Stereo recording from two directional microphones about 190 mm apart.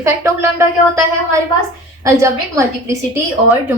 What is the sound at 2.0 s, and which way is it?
Speech, 15° right (ahead or behind).